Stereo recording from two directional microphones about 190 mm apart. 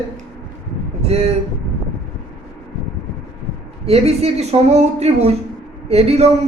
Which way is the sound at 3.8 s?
35° right (ahead or behind).